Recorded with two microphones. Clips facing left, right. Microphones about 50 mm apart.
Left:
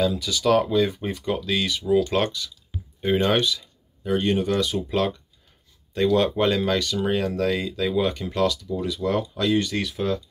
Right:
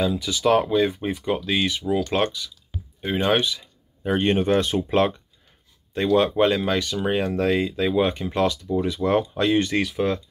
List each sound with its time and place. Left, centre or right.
0.0 s speech: centre
4.0 s speech: right
5.9 s speech: centre; by 10.2 s right